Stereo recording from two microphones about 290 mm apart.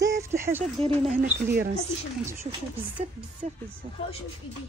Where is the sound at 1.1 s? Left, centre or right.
Right.